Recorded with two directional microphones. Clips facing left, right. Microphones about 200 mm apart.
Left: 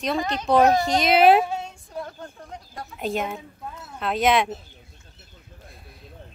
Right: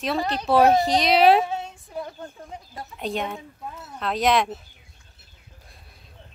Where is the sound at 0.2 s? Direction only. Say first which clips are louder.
Right 1 dB; 35° right (ahead or behind).